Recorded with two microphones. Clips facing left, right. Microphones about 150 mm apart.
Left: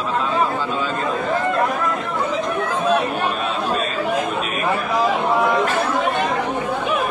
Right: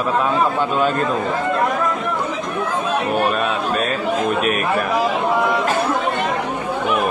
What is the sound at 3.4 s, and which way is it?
Chatter, 65° right (ahead or behind).